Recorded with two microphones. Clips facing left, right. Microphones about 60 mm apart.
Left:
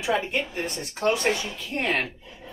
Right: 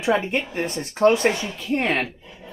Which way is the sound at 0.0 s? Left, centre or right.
Right.